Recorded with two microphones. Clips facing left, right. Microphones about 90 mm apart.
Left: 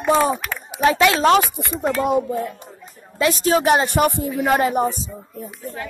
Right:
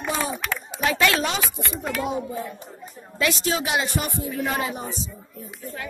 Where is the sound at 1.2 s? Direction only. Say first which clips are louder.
Left 12 dB; 55° left (ahead or behind).